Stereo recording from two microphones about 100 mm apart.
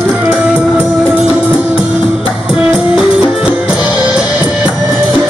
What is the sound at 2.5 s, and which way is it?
Music, 5° right (ahead or behind).